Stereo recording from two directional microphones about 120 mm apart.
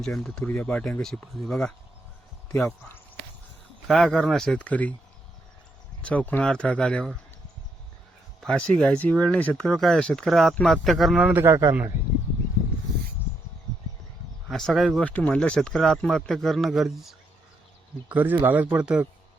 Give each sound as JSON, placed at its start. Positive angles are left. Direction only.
{"t": 0.0, "sound": "speech", "side_deg": 5}
{"t": 3.8, "sound": "speech", "side_deg": 5}
{"t": 6.0, "sound": "speech", "side_deg": 10}
{"t": 8.4, "sound": "speech", "side_deg": 5}
{"t": 11.4, "sound": "a man's voice", "side_deg": -25}
{"t": 14.5, "sound": "speech", "side_deg": 0}
{"t": 15.0, "sound": "speech", "side_deg": 10}
{"t": 18.1, "sound": "a man's voice", "side_deg": -15}